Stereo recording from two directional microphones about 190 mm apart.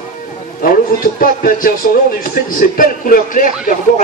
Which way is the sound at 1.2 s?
50° left (ahead or behind).